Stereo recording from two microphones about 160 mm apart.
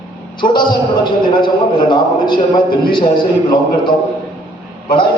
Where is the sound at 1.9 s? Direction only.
30° left (ahead or behind).